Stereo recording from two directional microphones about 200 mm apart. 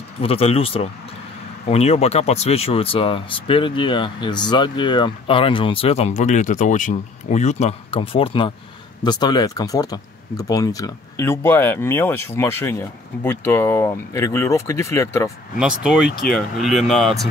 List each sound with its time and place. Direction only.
0.2 s speech: 30° left (ahead or behind)
15.6 s speech: 5° right (ahead or behind)